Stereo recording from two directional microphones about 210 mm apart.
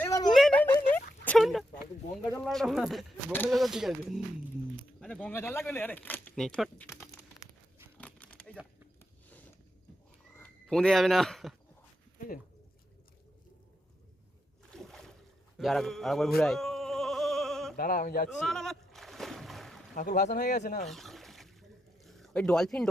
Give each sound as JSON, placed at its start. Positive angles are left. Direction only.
{"t": 0.0, "sound": "a sound", "side_deg": 15}
{"t": 0.3, "sound": "a sound", "side_deg": 0}
{"t": 2.3, "sound": "speech", "side_deg": 0}
{"t": 7.9, "sound": "crumpling", "side_deg": 5}
{"t": 10.3, "sound": "speech", "side_deg": 5}
{"t": 14.7, "sound": "boat", "side_deg": 0}
{"t": 15.5, "sound": "speech", "side_deg": 0}
{"t": 16.4, "sound": "bleat", "side_deg": 0}
{"t": 17.7, "sound": "speech", "side_deg": 40}
{"t": 18.3, "sound": "splash", "side_deg": 0}
{"t": 20.0, "sound": "speech", "side_deg": 40}
{"t": 20.8, "sound": "trickle", "side_deg": 0}
{"t": 22.0, "sound": "a sound", "side_deg": 0}